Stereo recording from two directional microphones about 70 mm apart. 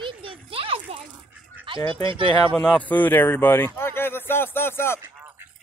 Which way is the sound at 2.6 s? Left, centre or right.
Left.